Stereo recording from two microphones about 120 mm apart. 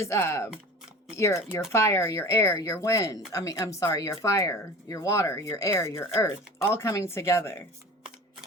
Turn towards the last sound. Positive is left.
turn(degrees=20)  # may be behind; listen again after turning